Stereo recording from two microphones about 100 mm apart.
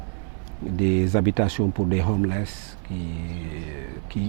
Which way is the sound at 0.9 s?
15° right (ahead or behind).